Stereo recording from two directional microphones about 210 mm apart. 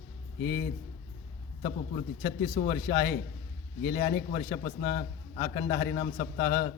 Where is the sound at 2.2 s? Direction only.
50° left (ahead or behind).